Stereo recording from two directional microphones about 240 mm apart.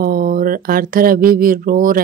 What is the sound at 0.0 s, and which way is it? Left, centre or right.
A woman's voice, right.